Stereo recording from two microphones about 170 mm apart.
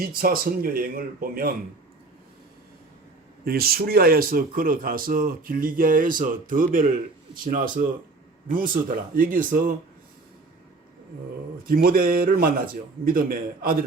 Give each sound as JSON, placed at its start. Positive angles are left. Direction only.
{"t": 0.0, "sound": "speech", "side_deg": -60}
{"t": 3.4, "sound": "speech", "side_deg": -60}
{"t": 11.7, "sound": "speech", "side_deg": -55}